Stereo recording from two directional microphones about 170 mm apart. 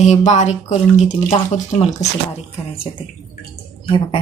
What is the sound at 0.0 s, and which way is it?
Speech, 45° left (ahead or behind).